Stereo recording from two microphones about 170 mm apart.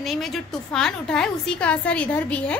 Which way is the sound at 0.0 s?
Centre (ahead or behind).